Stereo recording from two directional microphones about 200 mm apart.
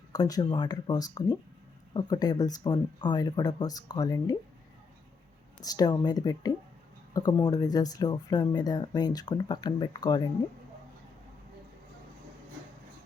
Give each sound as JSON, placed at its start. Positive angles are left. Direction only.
{"t": 0.1, "sound": "speech", "side_deg": 20}
{"t": 5.6, "sound": "speech", "side_deg": 20}